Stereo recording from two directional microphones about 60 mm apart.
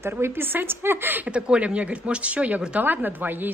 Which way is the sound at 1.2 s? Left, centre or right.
Centre.